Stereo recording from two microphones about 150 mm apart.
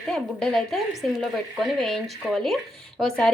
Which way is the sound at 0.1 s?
5° left (ahead or behind).